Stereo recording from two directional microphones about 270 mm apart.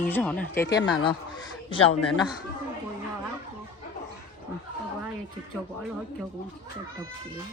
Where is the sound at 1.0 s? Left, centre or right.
Centre.